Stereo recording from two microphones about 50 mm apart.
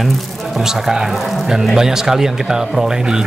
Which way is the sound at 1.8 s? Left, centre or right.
Centre.